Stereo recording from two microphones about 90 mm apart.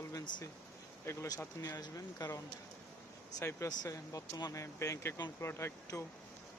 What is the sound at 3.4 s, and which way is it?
Speech, 35° left (ahead or behind).